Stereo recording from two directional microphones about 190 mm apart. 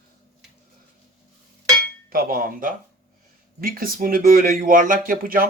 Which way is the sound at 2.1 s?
50° right (ahead or behind).